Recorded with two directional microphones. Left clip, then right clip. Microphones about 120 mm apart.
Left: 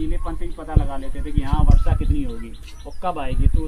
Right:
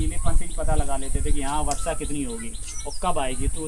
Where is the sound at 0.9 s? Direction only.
50° right (ahead or behind).